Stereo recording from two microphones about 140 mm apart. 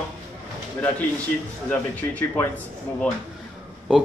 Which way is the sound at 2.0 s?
25° left (ahead or behind).